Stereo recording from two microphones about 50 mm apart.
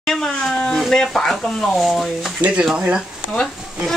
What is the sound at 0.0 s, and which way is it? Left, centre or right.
Speech, centre.